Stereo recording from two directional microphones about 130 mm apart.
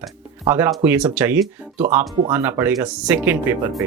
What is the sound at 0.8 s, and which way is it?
Speech, 10° right (ahead or behind).